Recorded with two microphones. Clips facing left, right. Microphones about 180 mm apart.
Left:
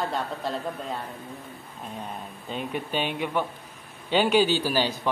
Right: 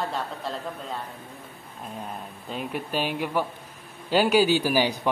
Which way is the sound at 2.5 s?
5° right (ahead or behind).